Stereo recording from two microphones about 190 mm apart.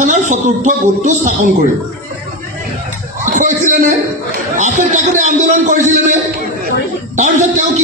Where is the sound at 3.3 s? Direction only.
40° right (ahead or behind).